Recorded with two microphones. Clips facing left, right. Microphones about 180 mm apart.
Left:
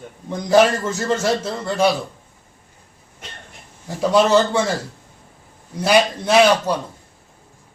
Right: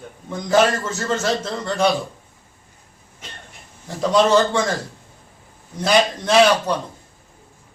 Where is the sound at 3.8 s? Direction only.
10° left (ahead or behind).